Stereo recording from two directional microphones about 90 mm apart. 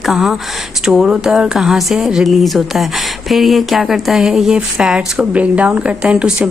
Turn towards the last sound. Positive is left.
turn(degrees=-10)  # may be behind; listen again after turning